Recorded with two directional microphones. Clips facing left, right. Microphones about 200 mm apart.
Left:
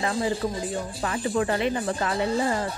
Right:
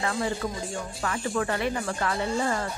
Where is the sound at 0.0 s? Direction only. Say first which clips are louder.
Left 3 dB; 25° left (ahead or behind).